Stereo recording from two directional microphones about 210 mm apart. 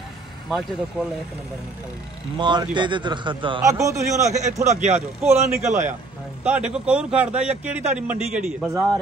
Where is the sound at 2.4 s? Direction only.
20° right (ahead or behind).